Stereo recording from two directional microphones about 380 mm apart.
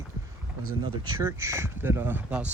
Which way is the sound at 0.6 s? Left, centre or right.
Right.